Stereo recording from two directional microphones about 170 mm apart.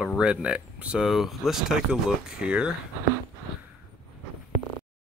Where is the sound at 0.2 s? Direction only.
5° right (ahead or behind).